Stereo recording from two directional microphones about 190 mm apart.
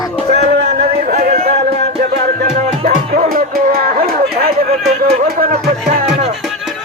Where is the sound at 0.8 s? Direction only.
45° right (ahead or behind).